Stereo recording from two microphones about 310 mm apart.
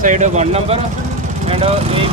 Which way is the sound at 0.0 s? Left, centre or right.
Right.